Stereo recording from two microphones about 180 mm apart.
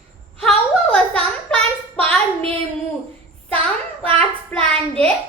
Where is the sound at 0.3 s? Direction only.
5° left (ahead or behind).